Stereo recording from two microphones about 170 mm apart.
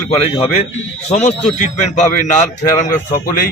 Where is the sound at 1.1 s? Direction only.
40° left (ahead or behind).